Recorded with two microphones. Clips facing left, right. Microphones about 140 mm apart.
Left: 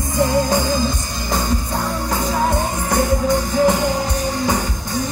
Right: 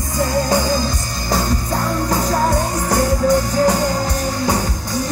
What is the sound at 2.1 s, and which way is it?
Music, 40° right (ahead or behind).